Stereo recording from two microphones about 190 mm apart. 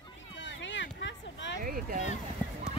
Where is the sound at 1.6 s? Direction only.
45° right (ahead or behind).